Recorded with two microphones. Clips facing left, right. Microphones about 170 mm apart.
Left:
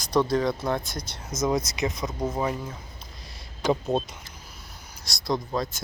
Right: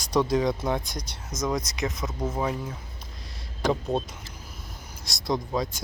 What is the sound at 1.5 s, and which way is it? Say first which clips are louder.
Speech: left 3 dB; centre (ahead or behind).